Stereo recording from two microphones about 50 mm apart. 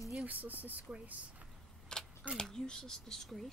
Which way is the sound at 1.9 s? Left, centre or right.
Centre.